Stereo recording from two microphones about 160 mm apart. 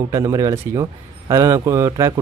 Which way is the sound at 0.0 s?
20° right (ahead or behind).